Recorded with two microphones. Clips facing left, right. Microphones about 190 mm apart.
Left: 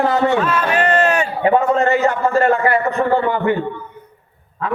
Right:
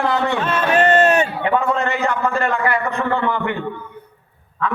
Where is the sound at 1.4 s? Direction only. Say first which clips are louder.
Left 5 dB; 45° left (ahead or behind).